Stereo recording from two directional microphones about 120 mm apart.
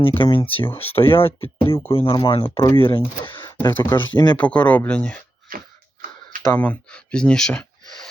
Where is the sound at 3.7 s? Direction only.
15° left (ahead or behind).